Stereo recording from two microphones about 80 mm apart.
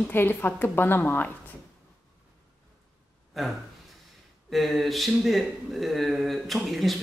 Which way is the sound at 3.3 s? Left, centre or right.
Centre.